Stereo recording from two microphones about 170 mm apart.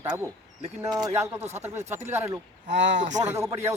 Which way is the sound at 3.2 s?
15° right (ahead or behind).